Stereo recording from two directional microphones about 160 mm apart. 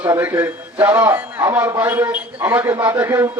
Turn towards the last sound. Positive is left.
turn(degrees=-15)  # may be behind; listen again after turning